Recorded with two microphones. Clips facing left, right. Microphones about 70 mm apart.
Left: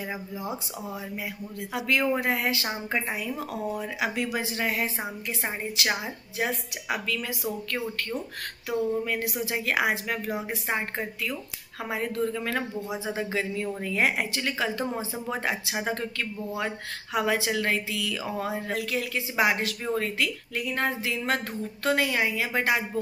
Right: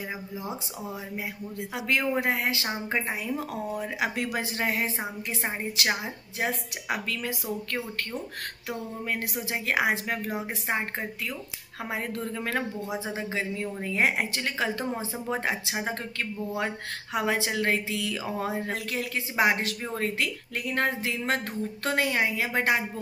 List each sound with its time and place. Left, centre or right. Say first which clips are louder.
1.7 s speech: left 2 dB; right
3.8 s speech: even; right
6.4 s speech: even; right
8.6 s speech: left 7 dB; right
11.9 s speech: left 4 dB; right
14.3 s speech: left 1 dB; right
21.8 s speech: left 2 dB; right